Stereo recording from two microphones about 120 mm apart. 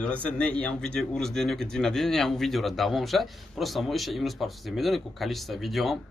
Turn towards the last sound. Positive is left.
turn(degrees=0)  # may be behind; listen again after turning